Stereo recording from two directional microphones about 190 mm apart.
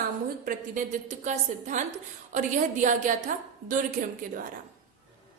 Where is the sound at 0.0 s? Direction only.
45° right (ahead or behind).